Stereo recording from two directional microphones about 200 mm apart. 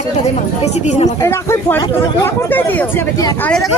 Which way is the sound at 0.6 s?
35° left (ahead or behind).